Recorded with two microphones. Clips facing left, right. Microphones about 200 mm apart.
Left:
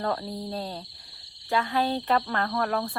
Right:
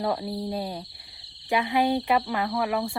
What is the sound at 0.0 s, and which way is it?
Speech, 10° right (ahead or behind).